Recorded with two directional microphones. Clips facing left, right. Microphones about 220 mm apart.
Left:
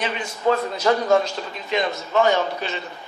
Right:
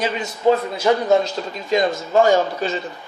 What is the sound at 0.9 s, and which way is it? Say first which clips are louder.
Speech: right 2 dB; 15° right (ahead or behind).